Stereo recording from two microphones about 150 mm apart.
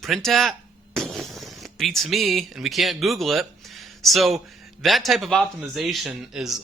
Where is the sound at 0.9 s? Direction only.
Centre (ahead or behind).